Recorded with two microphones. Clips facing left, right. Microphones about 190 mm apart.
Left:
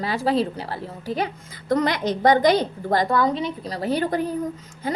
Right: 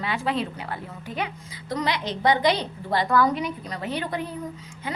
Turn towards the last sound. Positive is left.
turn(degrees=40)  # may be behind; listen again after turning